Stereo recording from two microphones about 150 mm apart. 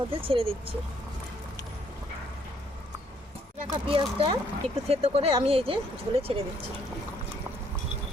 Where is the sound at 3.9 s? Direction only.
40° right (ahead or behind).